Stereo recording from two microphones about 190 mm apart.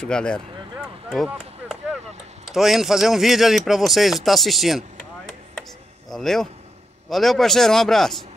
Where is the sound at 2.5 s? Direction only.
Centre (ahead or behind).